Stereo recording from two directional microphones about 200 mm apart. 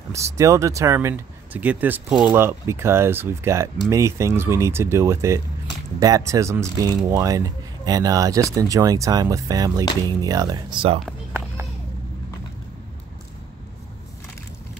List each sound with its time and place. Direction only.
0.1 s speech: 15° right (ahead or behind)